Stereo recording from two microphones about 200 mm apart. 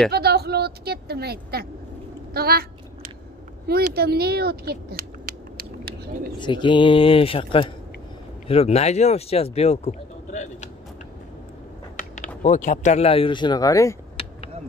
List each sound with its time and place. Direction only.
0.1 s a sound: 55° right (ahead or behind)
3.6 s speech: 50° right (ahead or behind)
6.4 s speech: 25° left (ahead or behind)
12.4 s speech: 40° left (ahead or behind); by 13.9 s 15° left (ahead or behind)